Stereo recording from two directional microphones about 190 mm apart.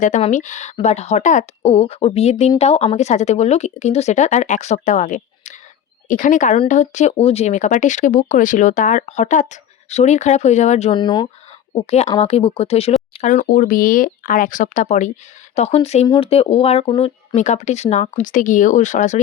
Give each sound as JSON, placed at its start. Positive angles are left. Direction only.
{"t": 0.0, "sound": "a woman's voice", "side_deg": 40}
{"t": 11.7, "sound": "speech", "side_deg": 35}